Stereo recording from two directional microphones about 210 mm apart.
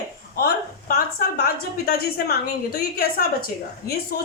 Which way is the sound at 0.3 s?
45° left (ahead or behind).